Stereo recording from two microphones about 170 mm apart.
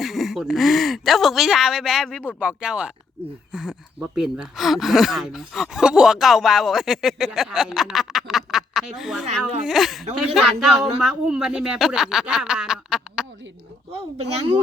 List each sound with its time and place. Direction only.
0.0 s speech: centre (ahead or behind)
14.2 s speech: 35° right (ahead or behind)